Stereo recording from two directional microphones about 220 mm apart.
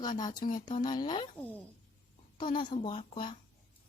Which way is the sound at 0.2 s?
20° left (ahead or behind).